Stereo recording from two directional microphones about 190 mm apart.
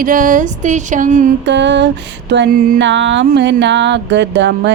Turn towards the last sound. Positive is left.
turn(degrees=-70)  # may be behind; listen again after turning